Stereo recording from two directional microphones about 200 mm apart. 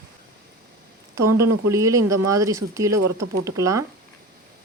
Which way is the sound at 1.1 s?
15° right (ahead or behind).